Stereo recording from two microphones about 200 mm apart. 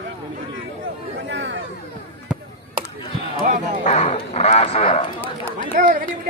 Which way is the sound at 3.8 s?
35° left (ahead or behind).